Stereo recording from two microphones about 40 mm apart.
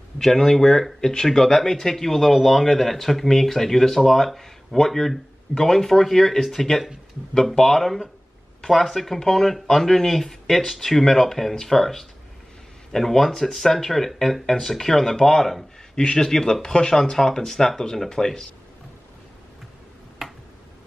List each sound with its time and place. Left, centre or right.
0.2 s speech: centre
20.2 s finger snapping: centre